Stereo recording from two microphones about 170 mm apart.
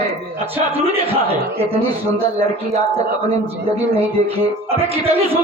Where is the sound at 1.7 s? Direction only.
35° right (ahead or behind).